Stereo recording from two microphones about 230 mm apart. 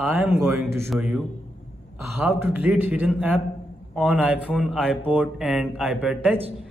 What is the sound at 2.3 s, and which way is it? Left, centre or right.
Speech, centre.